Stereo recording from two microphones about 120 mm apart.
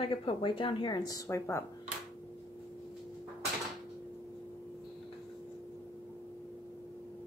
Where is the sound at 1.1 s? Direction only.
25° left (ahead or behind).